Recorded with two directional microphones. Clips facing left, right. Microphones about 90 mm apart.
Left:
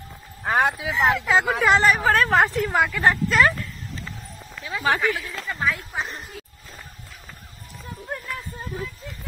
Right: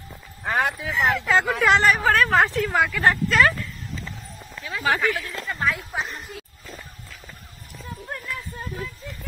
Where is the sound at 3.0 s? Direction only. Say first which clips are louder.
Even; 10° left (ahead or behind).